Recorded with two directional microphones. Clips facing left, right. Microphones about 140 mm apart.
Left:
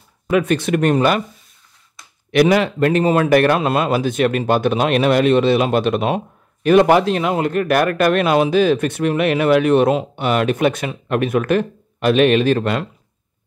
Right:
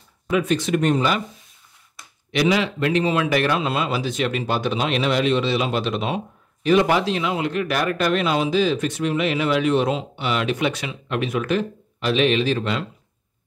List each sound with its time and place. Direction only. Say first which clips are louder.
0.3 s speech: left 4 dB; 60° left (ahead or behind)
2.3 s speech: left 6 dB; 55° left (ahead or behind)